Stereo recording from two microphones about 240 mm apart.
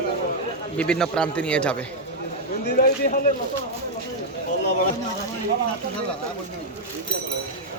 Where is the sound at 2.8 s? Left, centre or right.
Left.